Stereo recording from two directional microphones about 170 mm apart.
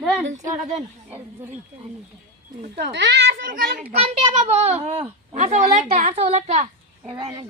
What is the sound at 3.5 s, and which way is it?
Speech, 60° right (ahead or behind).